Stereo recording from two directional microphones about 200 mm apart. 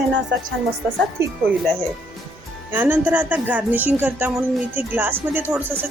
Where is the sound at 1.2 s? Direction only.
15° right (ahead or behind).